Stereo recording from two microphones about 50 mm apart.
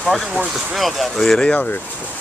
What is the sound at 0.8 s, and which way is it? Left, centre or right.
Music, centre.